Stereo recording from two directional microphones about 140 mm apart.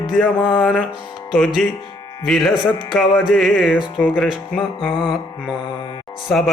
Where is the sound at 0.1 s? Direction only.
Centre (ahead or behind).